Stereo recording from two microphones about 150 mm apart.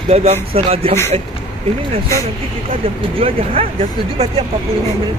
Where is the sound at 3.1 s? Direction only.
40° right (ahead or behind).